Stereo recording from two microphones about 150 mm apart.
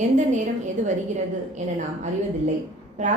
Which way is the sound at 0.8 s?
55° right (ahead or behind).